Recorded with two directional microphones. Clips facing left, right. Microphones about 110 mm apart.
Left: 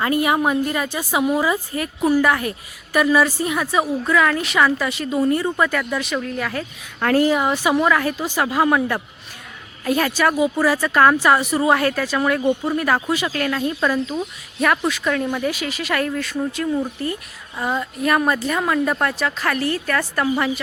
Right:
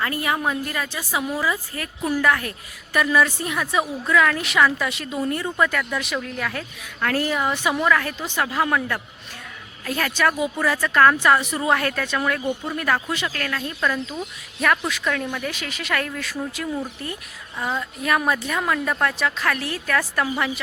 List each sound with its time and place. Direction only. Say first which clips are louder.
0.0 s a woman's voice: left 5 dB; 15° left (ahead or behind)
2.0 s a woman's voice: left 4 dB; 10° left (ahead or behind)
7.2 s speech: left 6 dB; 20° left (ahead or behind)
12.4 s a woman's voice: left 6 dB; 20° left (ahead or behind)
12.7 s a woman's voice: left 4 dB; 10° left (ahead or behind)